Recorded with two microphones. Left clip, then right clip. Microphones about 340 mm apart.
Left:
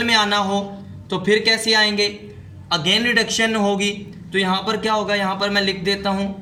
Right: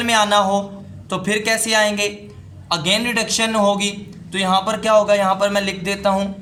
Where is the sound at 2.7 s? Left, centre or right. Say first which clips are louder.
Left 1 dB; centre.